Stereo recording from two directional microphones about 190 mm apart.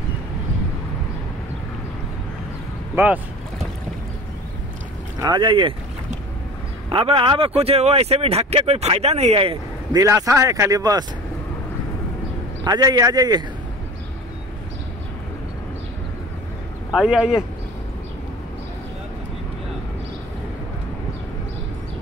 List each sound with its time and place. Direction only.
3.0 s speech: 15° right (ahead or behind)
5.2 s a man's voice: 25° right (ahead or behind)
6.9 s speech: 30° right (ahead or behind)
9.9 s speech: 20° right (ahead or behind)
12.6 s a man's voice: 20° right (ahead or behind)
16.9 s speech: 5° right (ahead or behind)